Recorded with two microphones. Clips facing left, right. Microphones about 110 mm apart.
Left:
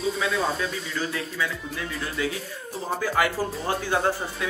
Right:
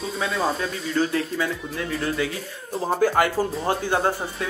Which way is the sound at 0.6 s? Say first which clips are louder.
Right 5 dB; 35° right (ahead or behind).